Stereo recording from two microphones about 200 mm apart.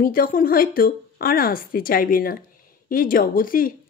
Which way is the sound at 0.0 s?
45° left (ahead or behind).